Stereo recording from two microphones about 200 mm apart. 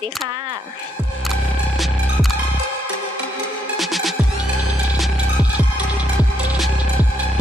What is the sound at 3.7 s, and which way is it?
Music, centre (ahead or behind).